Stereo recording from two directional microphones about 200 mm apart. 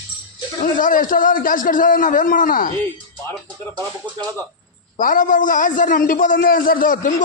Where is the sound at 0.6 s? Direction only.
40° left (ahead or behind).